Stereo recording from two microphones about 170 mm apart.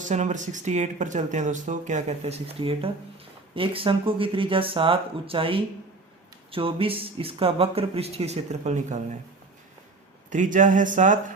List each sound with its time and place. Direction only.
0.0 s speech: 45° right (ahead or behind)
10.2 s speech: 50° right (ahead or behind)